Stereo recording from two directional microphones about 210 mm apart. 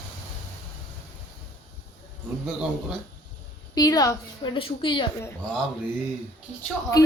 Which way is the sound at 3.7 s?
15° left (ahead or behind).